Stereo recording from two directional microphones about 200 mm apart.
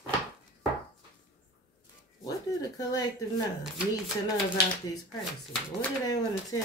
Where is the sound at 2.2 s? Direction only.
20° left (ahead or behind).